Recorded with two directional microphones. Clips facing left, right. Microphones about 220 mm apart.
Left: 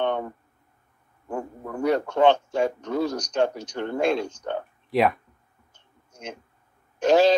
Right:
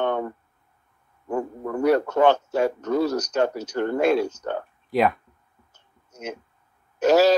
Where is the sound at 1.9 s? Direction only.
5° right (ahead or behind).